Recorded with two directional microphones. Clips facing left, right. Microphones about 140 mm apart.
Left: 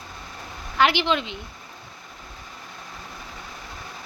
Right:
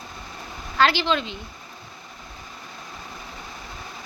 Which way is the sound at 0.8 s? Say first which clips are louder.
Even; 15° left (ahead or behind).